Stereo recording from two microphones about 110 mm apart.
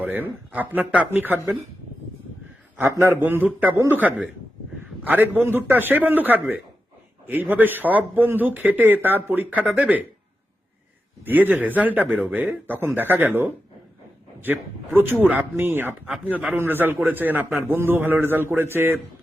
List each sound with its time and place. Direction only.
0.0 s speech: 15° right (ahead or behind)
2.9 s speech: 20° right (ahead or behind)
11.3 s speech: 15° right (ahead or behind)
14.9 s speech: 20° right (ahead or behind)